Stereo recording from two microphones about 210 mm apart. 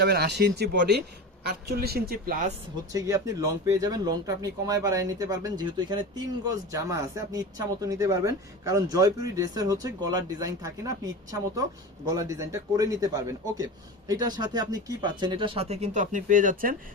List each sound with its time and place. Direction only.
0.0 s a woman's voice: 50° right (ahead or behind)
2.9 s speech: 15° right (ahead or behind); by 16.7 s 40° right (ahead or behind)